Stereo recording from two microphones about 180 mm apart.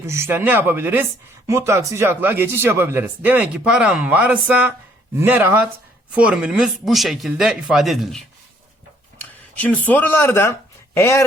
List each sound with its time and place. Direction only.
0.0 s speech: 15° right (ahead or behind)
9.6 s speech: 10° left (ahead or behind)